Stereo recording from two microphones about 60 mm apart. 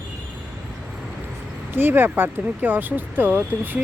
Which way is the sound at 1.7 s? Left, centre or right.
Right.